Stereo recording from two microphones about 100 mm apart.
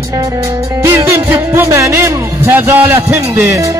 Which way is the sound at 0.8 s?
30° right (ahead or behind).